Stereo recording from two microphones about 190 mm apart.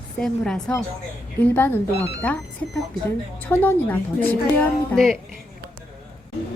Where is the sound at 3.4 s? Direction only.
10° left (ahead or behind).